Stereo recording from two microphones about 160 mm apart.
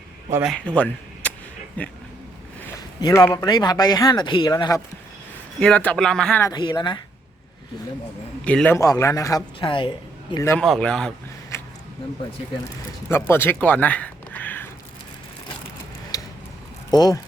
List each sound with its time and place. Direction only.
0.4 s speech: 5° left (ahead or behind)
3.0 s speech: 20° left (ahead or behind)
5.5 s speech: 5° left (ahead or behind)
6.4 s speech: 25° left (ahead or behind)
8.4 s speech: 10° left (ahead or behind)
8.8 s speech: 20° left (ahead or behind)
10.3 s speech: 20° left (ahead or behind)
10.6 s speech: 5° left (ahead or behind)
13.1 s speech: 15° left (ahead or behind)
16.1 s a sound: 20° left (ahead or behind)
16.9 s speech: 25° left (ahead or behind)